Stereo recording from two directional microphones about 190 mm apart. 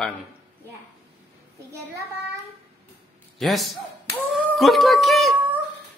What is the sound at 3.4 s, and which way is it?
Speech, centre (ahead or behind).